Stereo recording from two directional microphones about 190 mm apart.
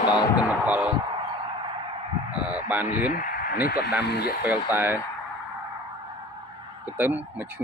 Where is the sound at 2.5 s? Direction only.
10° right (ahead or behind).